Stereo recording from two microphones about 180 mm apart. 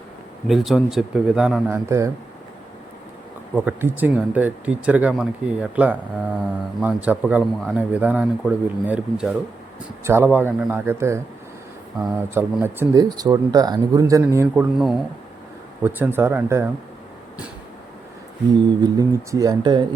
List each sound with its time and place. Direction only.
0.4 s speech: centre (ahead or behind)
1.6 s a man's voice: 15° right (ahead or behind)
3.5 s a man's voice: 10° right (ahead or behind)
12.3 s speech: 10° right (ahead or behind)
14.5 s speech: 5° right (ahead or behind)
15.8 s a man's voice: 10° right (ahead or behind)
18.8 s speech: 20° right (ahead or behind)